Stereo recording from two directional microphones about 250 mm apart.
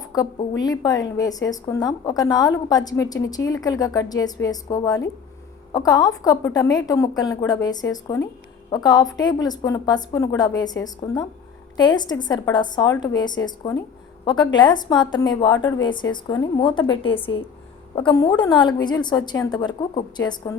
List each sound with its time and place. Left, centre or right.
0.0 s a woman's voice: centre